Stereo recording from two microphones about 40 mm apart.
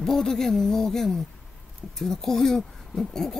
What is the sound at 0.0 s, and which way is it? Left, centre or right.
Speech, centre.